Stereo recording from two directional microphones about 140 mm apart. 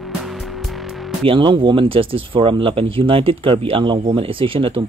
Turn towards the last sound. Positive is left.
turn(degrees=-40)  # may be behind; listen again after turning